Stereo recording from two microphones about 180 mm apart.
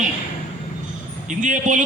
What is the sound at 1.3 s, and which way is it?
Speech, 45° right (ahead or behind).